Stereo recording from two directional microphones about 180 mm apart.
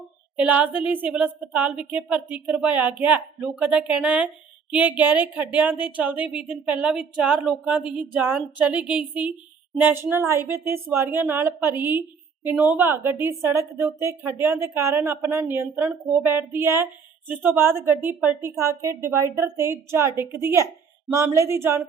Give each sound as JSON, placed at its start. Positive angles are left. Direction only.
{"t": 0.3, "sound": "a woman's voice", "side_deg": -10}